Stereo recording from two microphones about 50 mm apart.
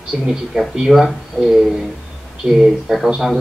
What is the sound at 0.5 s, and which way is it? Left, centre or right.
Speech, centre.